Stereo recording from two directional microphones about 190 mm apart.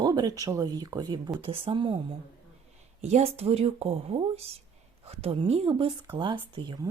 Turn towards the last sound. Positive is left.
turn(degrees=-25)  # may be behind; listen again after turning